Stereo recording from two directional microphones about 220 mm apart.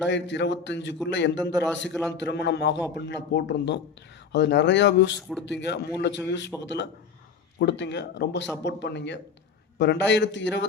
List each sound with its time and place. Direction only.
0.0 s speech: 55° left (ahead or behind)
5.1 s speech: centre (ahead or behind)
5.5 s speech: 50° left (ahead or behind)
7.6 s speech: 50° left (ahead or behind)